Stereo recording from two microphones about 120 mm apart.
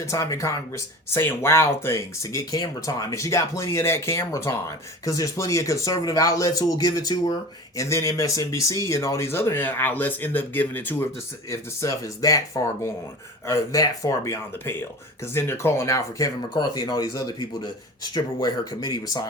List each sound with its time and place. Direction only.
0.0 s speech: 25° left (ahead or behind)